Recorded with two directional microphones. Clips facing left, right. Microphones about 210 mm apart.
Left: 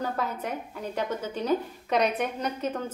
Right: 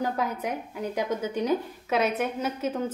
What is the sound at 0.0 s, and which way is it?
A woman's voice, 10° right (ahead or behind).